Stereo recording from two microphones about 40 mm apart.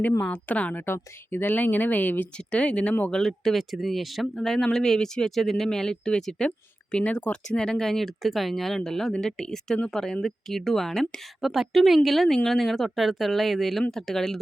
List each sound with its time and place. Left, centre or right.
0.0 s a woman's voice: left
0.9 s speech: left
1.5 s speech: left
2.5 s speech: left
3.1 s speech: centre
3.6 s speech: centre
4.4 s speech: centre
6.9 s speech: left; by 11.0 s centre
11.3 s speech: centre